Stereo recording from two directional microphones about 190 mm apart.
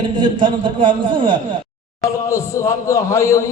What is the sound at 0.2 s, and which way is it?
A man's voice, 25° right (ahead or behind).